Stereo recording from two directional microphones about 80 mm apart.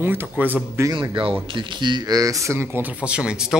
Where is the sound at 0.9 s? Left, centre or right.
Right.